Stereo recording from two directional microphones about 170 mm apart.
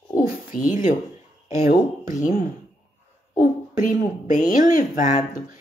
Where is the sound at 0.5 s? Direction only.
50° left (ahead or behind).